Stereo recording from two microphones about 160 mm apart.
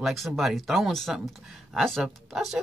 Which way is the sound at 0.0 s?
Centre (ahead or behind).